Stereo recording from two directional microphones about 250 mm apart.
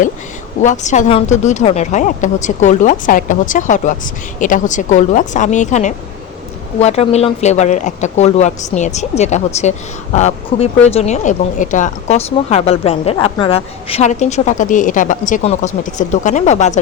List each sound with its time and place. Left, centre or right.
0.6 s speech: left